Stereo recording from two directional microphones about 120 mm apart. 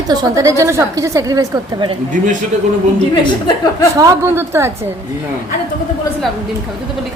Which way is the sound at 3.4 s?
35° left (ahead or behind).